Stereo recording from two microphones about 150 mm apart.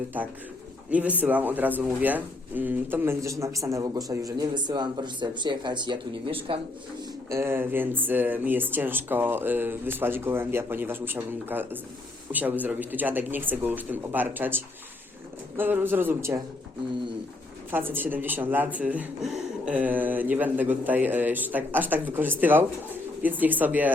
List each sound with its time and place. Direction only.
0.1 s speech: 10° right (ahead or behind); by 6.6 s 35° right (ahead or behind)
7.3 s speech: 15° right (ahead or behind)
17.7 s speech: 15° right (ahead or behind)